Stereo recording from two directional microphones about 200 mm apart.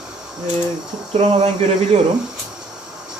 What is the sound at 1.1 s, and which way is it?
Speech, 25° right (ahead or behind).